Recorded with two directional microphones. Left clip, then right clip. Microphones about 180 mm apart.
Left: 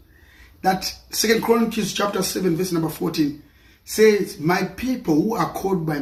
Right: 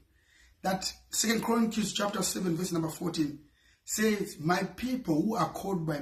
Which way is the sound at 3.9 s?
20° right (ahead or behind).